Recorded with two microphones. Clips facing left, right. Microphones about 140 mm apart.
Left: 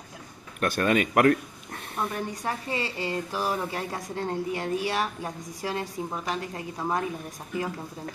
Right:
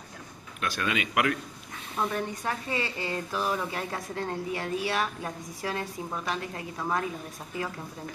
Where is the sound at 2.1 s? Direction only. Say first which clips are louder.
Even; 15° left (ahead or behind).